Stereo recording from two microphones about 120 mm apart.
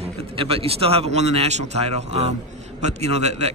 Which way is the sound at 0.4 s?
55° right (ahead or behind).